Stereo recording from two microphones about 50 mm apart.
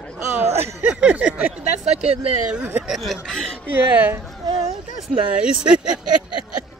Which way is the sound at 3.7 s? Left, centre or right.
Right.